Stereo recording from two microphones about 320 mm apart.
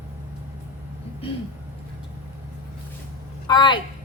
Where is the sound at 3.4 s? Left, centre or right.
Centre.